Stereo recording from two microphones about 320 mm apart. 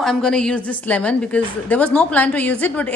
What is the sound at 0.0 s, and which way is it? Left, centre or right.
A woman's voice, centre.